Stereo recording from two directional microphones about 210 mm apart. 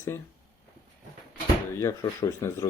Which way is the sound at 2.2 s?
20° left (ahead or behind).